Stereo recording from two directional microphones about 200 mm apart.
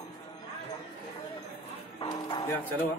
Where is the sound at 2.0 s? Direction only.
20° left (ahead or behind).